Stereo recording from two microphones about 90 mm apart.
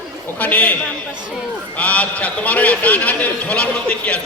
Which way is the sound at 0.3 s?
15° left (ahead or behind).